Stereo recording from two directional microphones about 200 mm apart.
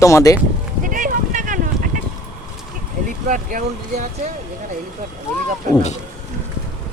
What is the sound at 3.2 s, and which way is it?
Speech, 40° right (ahead or behind).